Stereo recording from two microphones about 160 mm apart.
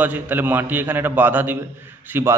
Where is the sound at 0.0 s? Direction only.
10° right (ahead or behind).